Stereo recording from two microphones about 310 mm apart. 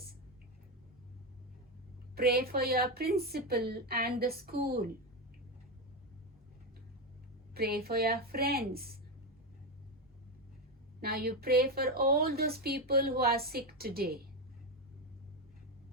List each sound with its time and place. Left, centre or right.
2.1 s a woman's voice: right
7.5 s a woman's voice: right
11.0 s a woman's voice: right